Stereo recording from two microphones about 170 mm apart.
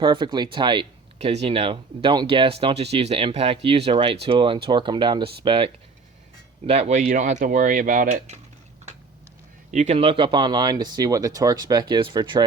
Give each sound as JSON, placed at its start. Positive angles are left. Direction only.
{"t": 0.0, "sound": "speech", "side_deg": -25}
{"t": 7.0, "sound": "speech", "side_deg": -55}
{"t": 9.7, "sound": "speech", "side_deg": -40}